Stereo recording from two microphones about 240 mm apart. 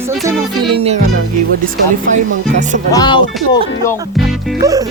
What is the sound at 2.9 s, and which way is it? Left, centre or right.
Speech, centre.